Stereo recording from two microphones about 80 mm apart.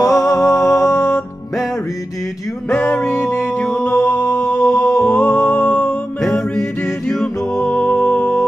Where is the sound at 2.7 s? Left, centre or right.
Centre.